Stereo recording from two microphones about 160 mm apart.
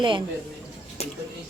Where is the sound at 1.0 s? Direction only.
40° left (ahead or behind).